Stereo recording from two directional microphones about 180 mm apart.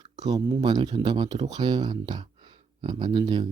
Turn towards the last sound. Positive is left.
turn(degrees=-25)  # may be behind; listen again after turning